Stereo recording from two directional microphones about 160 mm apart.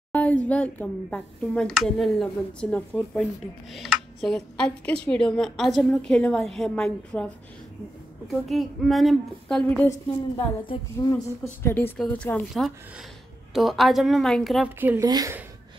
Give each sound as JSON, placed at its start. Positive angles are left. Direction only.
{"t": 0.1, "sound": "speech", "side_deg": 10}
{"t": 8.3, "sound": "speech", "side_deg": 0}
{"t": 11.0, "sound": "speech", "side_deg": 25}
{"t": 11.6, "sound": "speech", "side_deg": 15}
{"t": 14.8, "sound": "speech", "side_deg": -10}
{"t": 15.0, "sound": "speech", "side_deg": -25}